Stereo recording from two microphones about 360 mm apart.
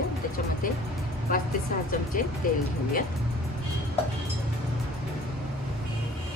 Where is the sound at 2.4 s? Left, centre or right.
Left.